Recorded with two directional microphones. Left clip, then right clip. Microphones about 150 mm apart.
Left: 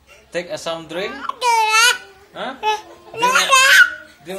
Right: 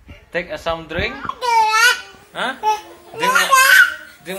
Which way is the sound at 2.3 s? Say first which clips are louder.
Right 5 dB; 20° right (ahead or behind).